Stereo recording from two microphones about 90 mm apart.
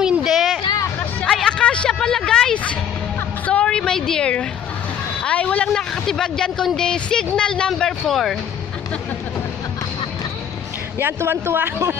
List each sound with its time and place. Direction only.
0.0 s a sound: 5° right (ahead or behind); by 7.2 s 10° left (ahead or behind)
7.3 s speech: 10° left (ahead or behind)
11.0 s a man's voice: 25° right (ahead or behind)